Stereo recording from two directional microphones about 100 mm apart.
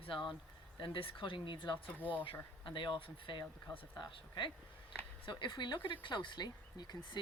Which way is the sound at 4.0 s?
50° left (ahead or behind).